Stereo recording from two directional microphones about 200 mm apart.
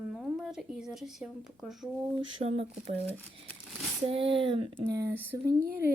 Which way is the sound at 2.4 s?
30° right (ahead or behind).